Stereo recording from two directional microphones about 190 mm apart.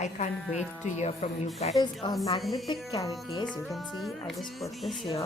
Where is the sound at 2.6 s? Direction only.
20° left (ahead or behind).